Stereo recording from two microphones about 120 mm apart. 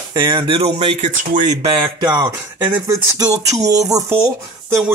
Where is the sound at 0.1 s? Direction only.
40° right (ahead or behind); by 1.7 s 80° right.